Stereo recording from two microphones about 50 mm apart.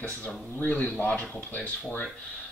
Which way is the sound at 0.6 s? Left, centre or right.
Left.